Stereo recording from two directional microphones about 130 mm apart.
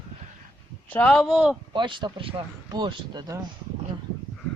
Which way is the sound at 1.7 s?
40° right (ahead or behind).